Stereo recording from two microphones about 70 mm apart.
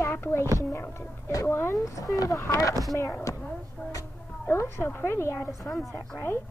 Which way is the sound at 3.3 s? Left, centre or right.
Left.